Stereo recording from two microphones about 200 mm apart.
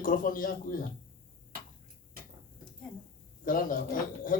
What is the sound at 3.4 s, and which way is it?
Speech, 45° left (ahead or behind).